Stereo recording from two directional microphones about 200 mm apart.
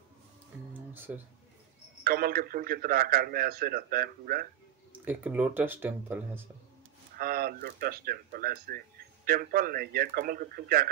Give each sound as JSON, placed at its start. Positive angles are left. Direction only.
{"t": 0.9, "sound": "speech", "side_deg": -10}
{"t": 2.0, "sound": "speech", "side_deg": -50}
{"t": 5.0, "sound": "speech", "side_deg": -10}
{"t": 7.2, "sound": "speech", "side_deg": -50}